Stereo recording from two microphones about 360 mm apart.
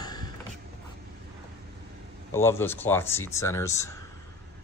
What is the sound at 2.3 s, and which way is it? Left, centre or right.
Speech, centre.